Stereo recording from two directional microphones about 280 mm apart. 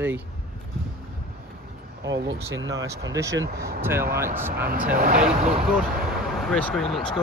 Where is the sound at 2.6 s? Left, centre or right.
Centre.